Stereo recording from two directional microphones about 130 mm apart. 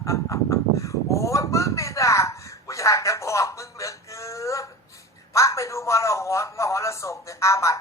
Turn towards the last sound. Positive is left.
turn(degrees=25)  # may be behind; listen again after turning